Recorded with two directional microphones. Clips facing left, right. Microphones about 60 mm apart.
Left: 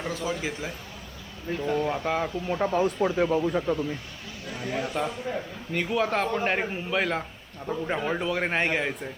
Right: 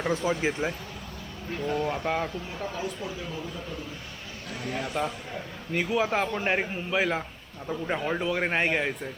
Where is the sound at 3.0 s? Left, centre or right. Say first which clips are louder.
Left 12 dB; left.